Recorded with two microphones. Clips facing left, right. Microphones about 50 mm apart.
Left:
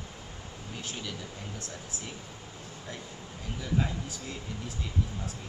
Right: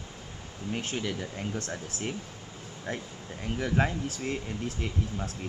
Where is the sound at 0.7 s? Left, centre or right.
Right.